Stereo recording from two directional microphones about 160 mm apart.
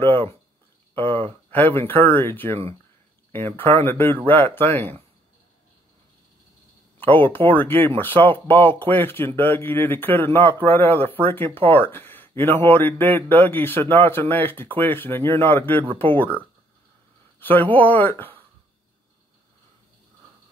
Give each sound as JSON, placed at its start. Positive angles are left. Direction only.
{"t": 0.0, "sound": "speech", "side_deg": 15}
{"t": 1.5, "sound": "speech", "side_deg": 10}
{"t": 7.0, "sound": "speech", "side_deg": 10}
{"t": 17.4, "sound": "speech", "side_deg": 10}